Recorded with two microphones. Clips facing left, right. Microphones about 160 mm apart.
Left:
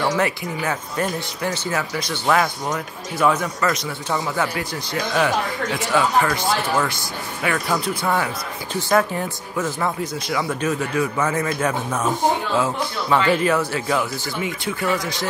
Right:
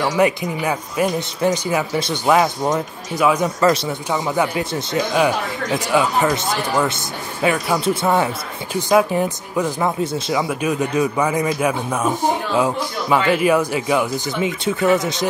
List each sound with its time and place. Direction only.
0.0 s speech: 15° right (ahead or behind)